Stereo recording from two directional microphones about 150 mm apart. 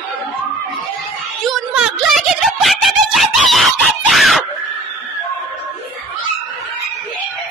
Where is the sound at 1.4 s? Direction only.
Centre (ahead or behind).